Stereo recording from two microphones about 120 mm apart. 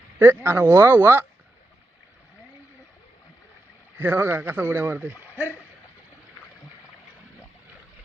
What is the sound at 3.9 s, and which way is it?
Speech, 15° right (ahead or behind).